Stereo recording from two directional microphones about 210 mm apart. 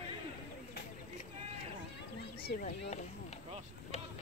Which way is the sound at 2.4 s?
50° left (ahead or behind).